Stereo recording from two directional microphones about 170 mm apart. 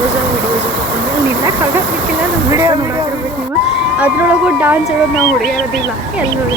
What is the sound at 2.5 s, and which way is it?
Speech, 20° right (ahead or behind).